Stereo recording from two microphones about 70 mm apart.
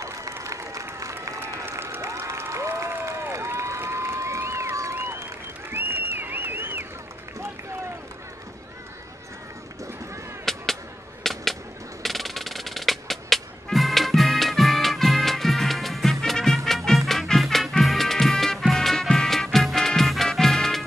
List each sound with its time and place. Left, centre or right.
0.3 s applause: right
1.7 s crowd: right
2.0 s crowd: right
4.9 s applause: right
5.7 s a sound: right
10.5 s a sound: centre
12.0 s music: centre